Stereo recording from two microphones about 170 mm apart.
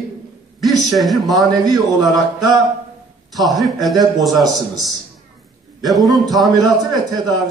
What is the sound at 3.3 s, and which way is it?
Speech, centre (ahead or behind).